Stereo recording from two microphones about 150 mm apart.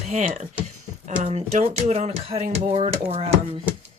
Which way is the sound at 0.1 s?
55° right (ahead or behind).